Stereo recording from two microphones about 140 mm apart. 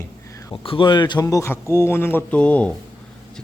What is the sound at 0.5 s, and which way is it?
Speech, 40° left (ahead or behind).